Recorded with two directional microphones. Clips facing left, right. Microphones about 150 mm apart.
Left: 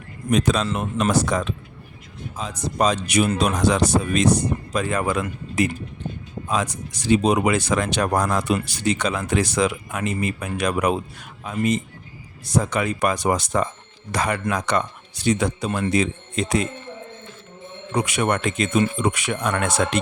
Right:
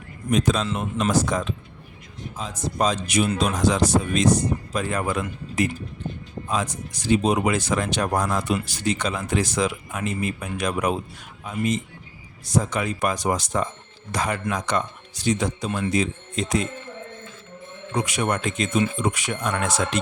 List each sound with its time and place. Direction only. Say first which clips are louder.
0.3 s speech: left 2 dB; 75° left (ahead or behind)
4.7 s speech: left 5 dB; 90° left
7.1 s speech: left 2 dB; 70° left (ahead or behind)
17.9 s speech: left 3 dB; 65° left (ahead or behind)